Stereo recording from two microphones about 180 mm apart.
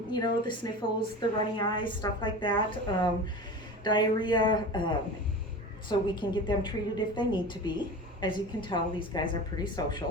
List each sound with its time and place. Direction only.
0.1 s a woman's voice: 25° left (ahead or behind)